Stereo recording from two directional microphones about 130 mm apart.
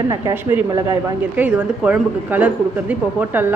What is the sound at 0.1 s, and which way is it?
A man's voice, 20° right (ahead or behind).